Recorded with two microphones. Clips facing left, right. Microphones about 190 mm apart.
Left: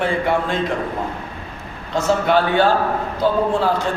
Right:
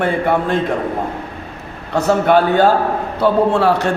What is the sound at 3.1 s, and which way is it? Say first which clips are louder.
Speech: right 5 dB; 70° right (ahead or behind).